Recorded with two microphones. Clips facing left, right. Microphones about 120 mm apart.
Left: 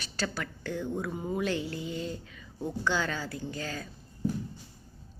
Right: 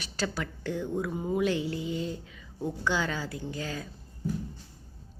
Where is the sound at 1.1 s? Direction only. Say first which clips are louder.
Right 4 dB; 15° right (ahead or behind).